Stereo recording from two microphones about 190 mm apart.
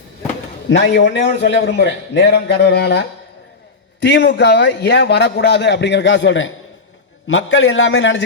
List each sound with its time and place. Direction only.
0.7 s a man's voice: 70° left (ahead or behind)
4.0 s a man's voice: 70° left (ahead or behind)